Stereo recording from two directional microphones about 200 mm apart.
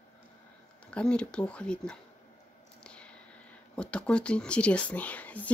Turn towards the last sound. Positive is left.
turn(degrees=5)  # may be behind; listen again after turning